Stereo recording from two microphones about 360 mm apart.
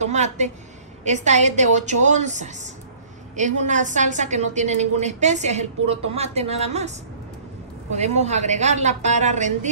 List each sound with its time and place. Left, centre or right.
0.0 s a woman's voice: centre
7.9 s a woman's voice: centre